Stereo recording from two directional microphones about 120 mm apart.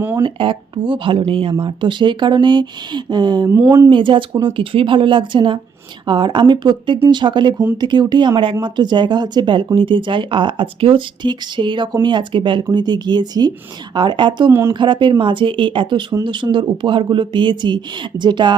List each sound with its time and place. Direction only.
0.2 s speech: 45° right (ahead or behind)
3.5 s speech: 20° right (ahead or behind)
3.8 s speech: 45° right (ahead or behind)